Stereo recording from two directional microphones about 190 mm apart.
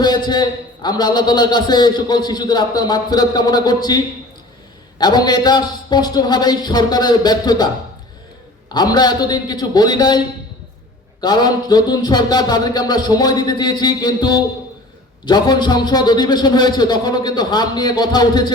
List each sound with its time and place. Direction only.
0.0 s a man's voice: 20° left (ahead or behind)
8.7 s a man's voice: 20° left (ahead or behind)